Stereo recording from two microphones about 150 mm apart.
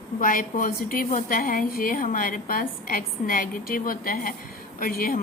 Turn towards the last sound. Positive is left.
turn(degrees=75)  # may be behind; listen again after turning